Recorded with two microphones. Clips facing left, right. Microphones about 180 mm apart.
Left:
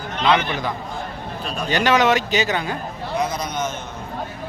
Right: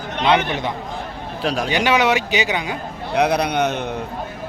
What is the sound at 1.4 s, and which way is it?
Speech, 90° right.